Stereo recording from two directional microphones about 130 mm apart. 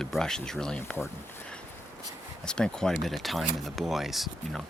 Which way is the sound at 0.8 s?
15° left (ahead or behind).